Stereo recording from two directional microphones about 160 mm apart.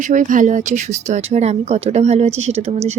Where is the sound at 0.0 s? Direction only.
55° right (ahead or behind).